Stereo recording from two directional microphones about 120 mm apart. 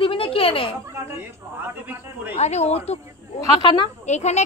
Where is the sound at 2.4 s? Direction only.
65° left (ahead or behind).